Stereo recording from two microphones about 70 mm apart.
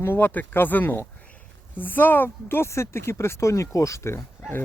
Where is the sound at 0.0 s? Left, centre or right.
Left.